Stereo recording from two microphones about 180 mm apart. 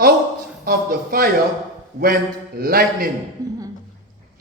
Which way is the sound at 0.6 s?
55° right (ahead or behind).